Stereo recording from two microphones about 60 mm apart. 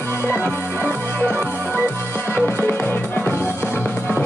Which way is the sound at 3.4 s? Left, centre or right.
Right.